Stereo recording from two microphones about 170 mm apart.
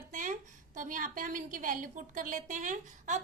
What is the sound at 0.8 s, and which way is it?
A woman's voice, 50° right (ahead or behind).